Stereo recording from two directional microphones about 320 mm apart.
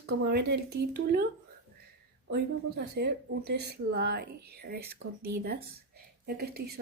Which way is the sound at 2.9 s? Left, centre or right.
Right.